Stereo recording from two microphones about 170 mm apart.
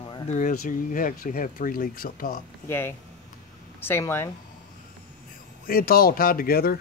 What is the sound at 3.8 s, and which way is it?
Speech, 15° left (ahead or behind).